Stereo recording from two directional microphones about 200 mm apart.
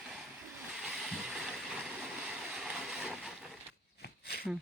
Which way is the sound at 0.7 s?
Centre (ahead or behind).